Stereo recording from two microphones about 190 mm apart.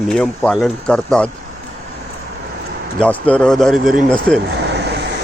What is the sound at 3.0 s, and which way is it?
Speech, 5° left (ahead or behind).